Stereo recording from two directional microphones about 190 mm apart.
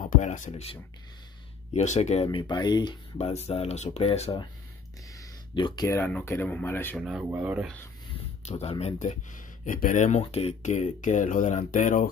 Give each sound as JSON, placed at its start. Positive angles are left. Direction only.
{"t": 0.0, "sound": "speech", "side_deg": 45}
{"t": 2.2, "sound": "speech", "side_deg": 20}
{"t": 5.5, "sound": "speech", "side_deg": 25}
{"t": 5.9, "sound": "speech", "side_deg": 10}
{"t": 7.0, "sound": "speech", "side_deg": -5}
{"t": 8.5, "sound": "speech", "side_deg": 30}